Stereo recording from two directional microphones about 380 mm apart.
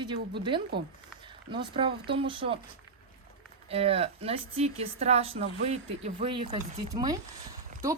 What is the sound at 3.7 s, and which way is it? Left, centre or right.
Speech, centre.